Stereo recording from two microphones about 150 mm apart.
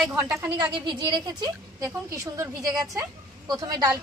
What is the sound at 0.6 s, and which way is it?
A woman's voice, 30° right (ahead or behind).